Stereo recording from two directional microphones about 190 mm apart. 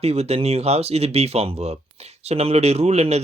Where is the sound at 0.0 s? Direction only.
35° right (ahead or behind).